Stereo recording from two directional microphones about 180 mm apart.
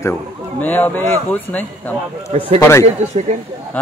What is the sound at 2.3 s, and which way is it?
Speech, 35° right (ahead or behind).